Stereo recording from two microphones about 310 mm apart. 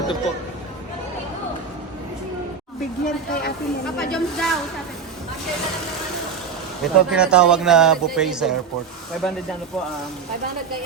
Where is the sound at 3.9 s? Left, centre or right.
Centre.